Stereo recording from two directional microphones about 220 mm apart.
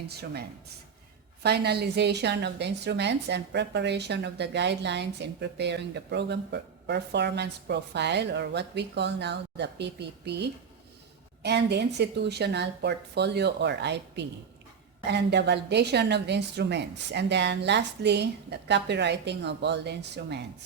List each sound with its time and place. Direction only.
1.4 s a woman's voice: 45° right (ahead or behind)